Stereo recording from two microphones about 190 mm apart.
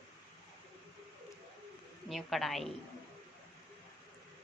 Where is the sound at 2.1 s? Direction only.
Centre (ahead or behind).